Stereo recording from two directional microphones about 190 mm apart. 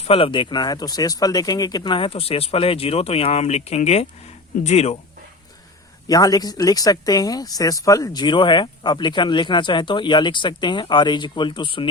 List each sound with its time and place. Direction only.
0.0 s speech: 30° left (ahead or behind)
6.1 s speech: 20° left (ahead or behind)